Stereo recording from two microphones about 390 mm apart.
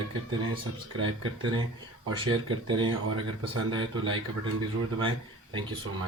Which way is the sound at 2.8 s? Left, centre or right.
Right.